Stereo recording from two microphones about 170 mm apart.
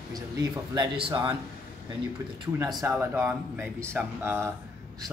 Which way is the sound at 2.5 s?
20° right (ahead or behind).